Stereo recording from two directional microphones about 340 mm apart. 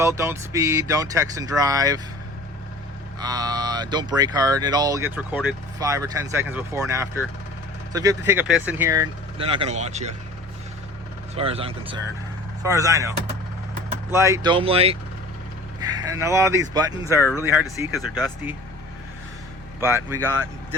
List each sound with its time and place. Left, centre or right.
0.0 s speech: centre
3.2 s speech: centre
11.3 s speech: centre
19.8 s speech: centre